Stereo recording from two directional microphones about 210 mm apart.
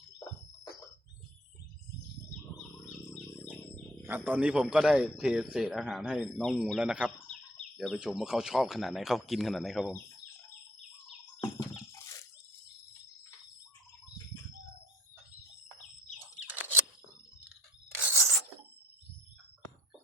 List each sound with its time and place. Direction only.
3.1 s bird: 5° left (ahead or behind)
4.0 s a man's voice: 10° right (ahead or behind)
11.3 s a sound: 15° left (ahead or behind)
16.1 s bird flight: 10° right (ahead or behind)